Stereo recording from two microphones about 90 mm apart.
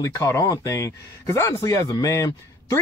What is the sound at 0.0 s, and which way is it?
Speech, 35° left (ahead or behind).